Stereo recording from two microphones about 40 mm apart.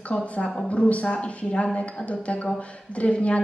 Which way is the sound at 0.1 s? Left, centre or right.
Left.